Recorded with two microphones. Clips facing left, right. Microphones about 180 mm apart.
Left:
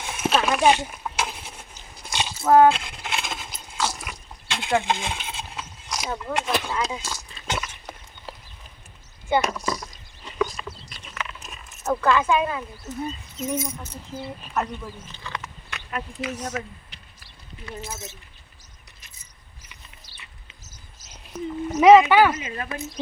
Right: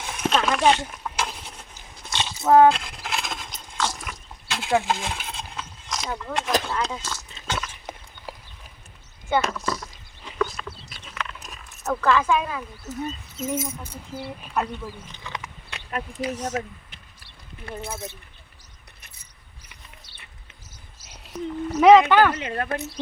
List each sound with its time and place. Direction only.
0.0 s a sound: 5° left (ahead or behind)
2.4 s speech: 20° right (ahead or behind)
2.6 s a sound: centre (ahead or behind)
6.7 s speech: 10° left (ahead or behind)
8.3 s clip-clop: 10° right (ahead or behind)
9.3 s speech: 15° left (ahead or behind)
10.3 s horse: 10° left (ahead or behind)
11.2 s a sound: 5° left (ahead or behind)
13.1 s speech: centre (ahead or behind)
15.7 s a sound: 40° right (ahead or behind)
16.3 s speech: 10° right (ahead or behind)
17.7 s speech: 55° right (ahead or behind)
21.8 s speech: 5° left (ahead or behind)
22.4 s speech: 60° right (ahead or behind)